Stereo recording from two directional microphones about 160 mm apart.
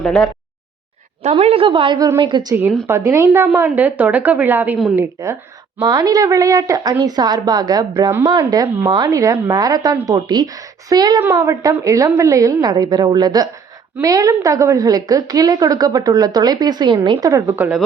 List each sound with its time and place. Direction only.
0.0 s a sound: 5° left (ahead or behind)
1.2 s a woman's voice: 40° right (ahead or behind)
2.6 s a woman's voice: 15° right (ahead or behind)